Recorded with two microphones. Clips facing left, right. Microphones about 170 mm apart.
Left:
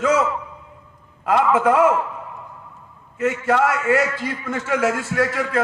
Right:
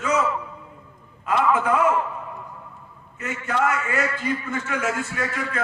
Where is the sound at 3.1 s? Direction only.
85° left.